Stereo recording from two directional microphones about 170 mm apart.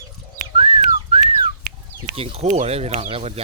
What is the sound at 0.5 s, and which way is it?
Whistling, 35° right (ahead or behind).